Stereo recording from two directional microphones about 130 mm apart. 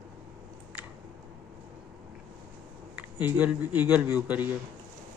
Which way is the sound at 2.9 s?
15° right (ahead or behind).